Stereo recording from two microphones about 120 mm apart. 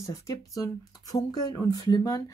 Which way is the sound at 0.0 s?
30° left (ahead or behind).